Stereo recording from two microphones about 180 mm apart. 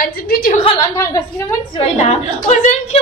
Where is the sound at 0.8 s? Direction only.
20° left (ahead or behind).